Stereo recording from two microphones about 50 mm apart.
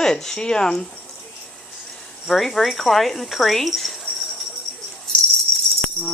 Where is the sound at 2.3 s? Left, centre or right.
Centre.